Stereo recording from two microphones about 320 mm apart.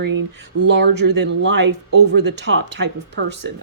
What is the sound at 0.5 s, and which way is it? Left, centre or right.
Speech, right.